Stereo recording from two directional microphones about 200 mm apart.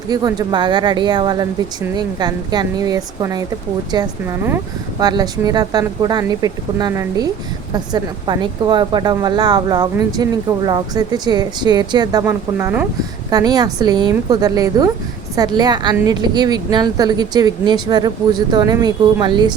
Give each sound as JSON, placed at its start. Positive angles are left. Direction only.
{"t": 0.1, "sound": "a woman's voice", "side_deg": -20}